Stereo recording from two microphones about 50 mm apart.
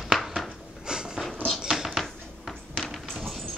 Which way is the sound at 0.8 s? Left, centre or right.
Centre.